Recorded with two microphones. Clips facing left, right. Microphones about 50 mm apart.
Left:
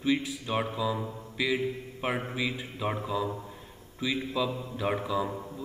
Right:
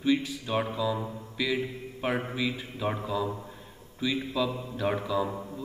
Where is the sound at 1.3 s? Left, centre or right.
Centre.